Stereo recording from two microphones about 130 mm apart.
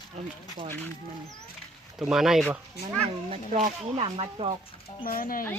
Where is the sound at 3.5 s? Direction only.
70° right (ahead or behind).